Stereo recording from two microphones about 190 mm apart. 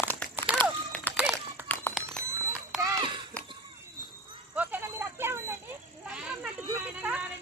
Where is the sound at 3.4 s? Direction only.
10° left (ahead or behind).